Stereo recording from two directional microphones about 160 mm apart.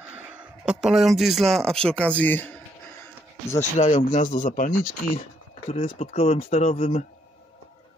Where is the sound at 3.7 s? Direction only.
50° left (ahead or behind).